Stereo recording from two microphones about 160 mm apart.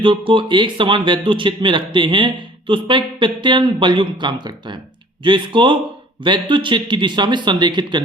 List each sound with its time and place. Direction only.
0.0 s a man's voice: 30° right (ahead or behind)